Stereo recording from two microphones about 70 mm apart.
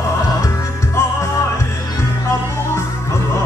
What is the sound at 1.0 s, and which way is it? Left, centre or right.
Music, left.